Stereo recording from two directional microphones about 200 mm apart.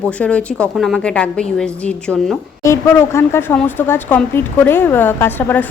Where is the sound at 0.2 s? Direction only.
5° left (ahead or behind).